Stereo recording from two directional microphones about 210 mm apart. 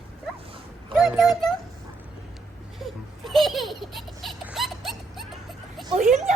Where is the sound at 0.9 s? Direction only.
Centre (ahead or behind).